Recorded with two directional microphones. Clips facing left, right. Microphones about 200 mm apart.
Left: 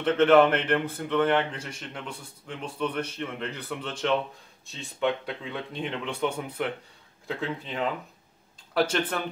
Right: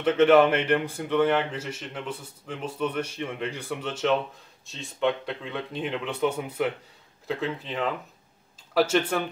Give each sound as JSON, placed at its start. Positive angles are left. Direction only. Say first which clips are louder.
{"t": 0.0, "sound": "a man's voice", "louder": "right 1 dB", "side_deg": -10}